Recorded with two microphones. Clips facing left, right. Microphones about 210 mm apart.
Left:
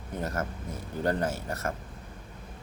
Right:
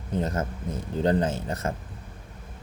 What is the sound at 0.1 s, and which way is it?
Speech, 20° right (ahead or behind).